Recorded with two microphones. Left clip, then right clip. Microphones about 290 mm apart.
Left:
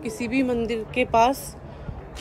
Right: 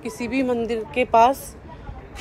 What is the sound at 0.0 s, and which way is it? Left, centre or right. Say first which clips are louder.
Speech: right 1 dB; centre.